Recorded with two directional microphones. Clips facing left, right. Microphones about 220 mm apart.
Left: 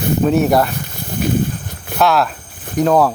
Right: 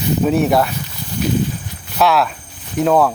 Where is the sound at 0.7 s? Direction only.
50° left (ahead or behind).